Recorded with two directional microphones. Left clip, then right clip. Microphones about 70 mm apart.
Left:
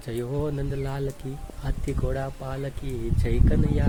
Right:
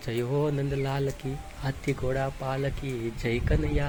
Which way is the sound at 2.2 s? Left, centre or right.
Left.